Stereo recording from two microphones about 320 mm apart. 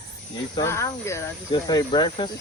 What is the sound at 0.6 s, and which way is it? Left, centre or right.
Speech, centre.